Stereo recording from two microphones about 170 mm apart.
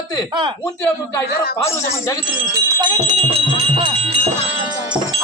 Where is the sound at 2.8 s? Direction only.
30° right (ahead or behind).